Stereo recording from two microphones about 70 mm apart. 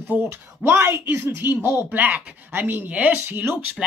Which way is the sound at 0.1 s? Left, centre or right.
Right.